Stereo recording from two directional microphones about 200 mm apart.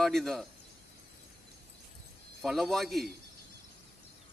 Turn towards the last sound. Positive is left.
turn(degrees=0)  # may be behind; listen again after turning